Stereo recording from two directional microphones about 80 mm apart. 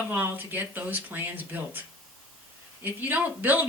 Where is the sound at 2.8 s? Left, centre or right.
Right.